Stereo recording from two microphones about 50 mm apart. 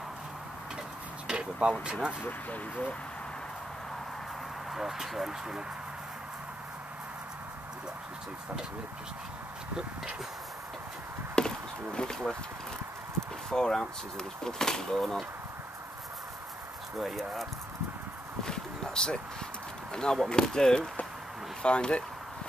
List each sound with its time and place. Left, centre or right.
1.2 s speech: centre
2.2 s speech: left
4.7 s speech: centre
11.3 s chop: centre
13.5 s speech: centre
17.0 s speech: centre
18.4 s a sound: centre
19.9 s speech: centre